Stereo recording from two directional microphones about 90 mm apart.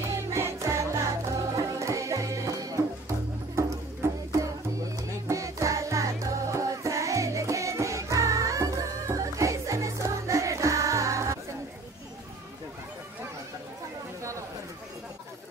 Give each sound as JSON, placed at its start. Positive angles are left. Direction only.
{"t": 0.1, "sound": "music", "side_deg": -30}